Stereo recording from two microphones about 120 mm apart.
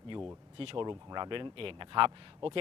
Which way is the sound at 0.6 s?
50° right (ahead or behind).